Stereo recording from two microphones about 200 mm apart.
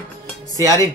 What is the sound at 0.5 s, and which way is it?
Speech, 15° right (ahead or behind).